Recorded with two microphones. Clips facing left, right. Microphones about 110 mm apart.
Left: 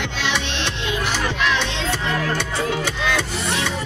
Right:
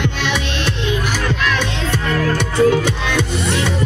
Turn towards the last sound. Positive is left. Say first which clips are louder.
# right 4 dB
turn(degrees=-20)  # may be behind; listen again after turning